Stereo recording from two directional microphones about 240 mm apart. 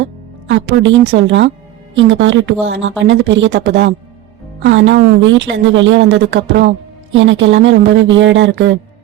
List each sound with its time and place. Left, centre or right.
0.4 s a woman's voice: right